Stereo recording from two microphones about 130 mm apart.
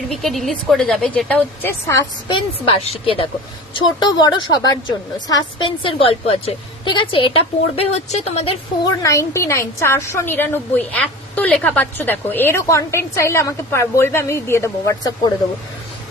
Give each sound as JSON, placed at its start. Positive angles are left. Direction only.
{"t": 0.1, "sound": "speech", "side_deg": 0}
{"t": 2.2, "sound": "a woman's voice", "side_deg": 40}
{"t": 4.0, "sound": "a woman's voice", "side_deg": 35}
{"t": 8.8, "sound": "a woman's voice", "side_deg": 25}